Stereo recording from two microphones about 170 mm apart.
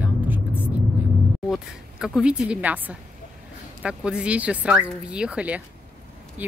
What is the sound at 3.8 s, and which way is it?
Speech, 5° right (ahead or behind).